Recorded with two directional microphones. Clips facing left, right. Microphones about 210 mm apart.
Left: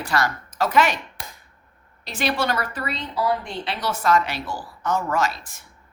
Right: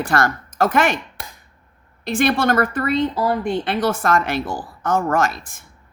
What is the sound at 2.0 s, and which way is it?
Speech, 50° right (ahead or behind).